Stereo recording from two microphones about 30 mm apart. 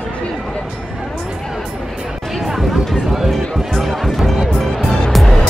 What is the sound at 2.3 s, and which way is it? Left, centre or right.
Chatter, centre.